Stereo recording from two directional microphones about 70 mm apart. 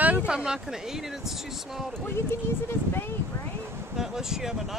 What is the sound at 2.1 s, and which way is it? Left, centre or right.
Speech, left.